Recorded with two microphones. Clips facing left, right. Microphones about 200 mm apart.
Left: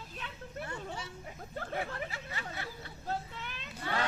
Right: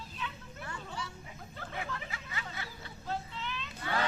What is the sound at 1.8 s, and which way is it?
Hubbub, 40° left (ahead or behind).